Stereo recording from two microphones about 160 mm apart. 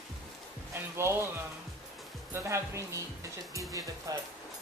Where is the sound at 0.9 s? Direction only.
15° right (ahead or behind).